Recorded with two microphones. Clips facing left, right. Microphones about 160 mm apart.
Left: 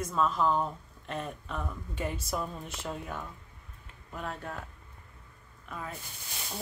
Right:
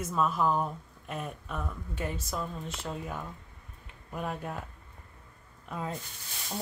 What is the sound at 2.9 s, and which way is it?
Speech, 5° right (ahead or behind).